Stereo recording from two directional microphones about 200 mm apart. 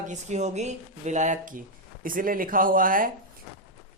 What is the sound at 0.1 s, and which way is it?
Speech, 35° right (ahead or behind).